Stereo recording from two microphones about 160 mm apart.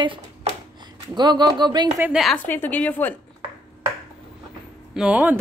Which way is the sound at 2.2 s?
10° left (ahead or behind).